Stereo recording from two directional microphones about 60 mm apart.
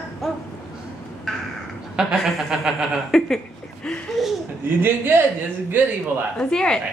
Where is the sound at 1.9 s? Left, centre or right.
Centre.